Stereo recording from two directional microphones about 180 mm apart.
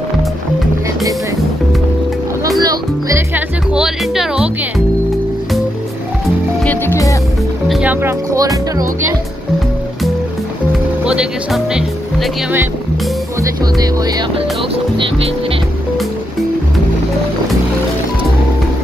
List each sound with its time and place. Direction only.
2.6 s music: 20° right (ahead or behind)
3.7 s speech: 5° right (ahead or behind)
6.6 s music: 10° left (ahead or behind)
7.6 s speech: 5° right (ahead or behind)
11.1 s speech: 5° right (ahead or behind)
13.4 s speech: 20° right (ahead or behind)